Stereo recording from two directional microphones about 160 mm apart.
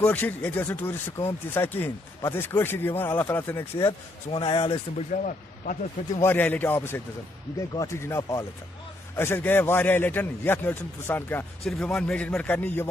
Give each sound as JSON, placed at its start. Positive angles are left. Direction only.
{"t": 0.0, "sound": "speech", "side_deg": 10}
{"t": 3.8, "sound": "speech", "side_deg": 35}
{"t": 5.1, "sound": "speech", "side_deg": 50}
{"t": 6.2, "sound": "speech", "side_deg": 10}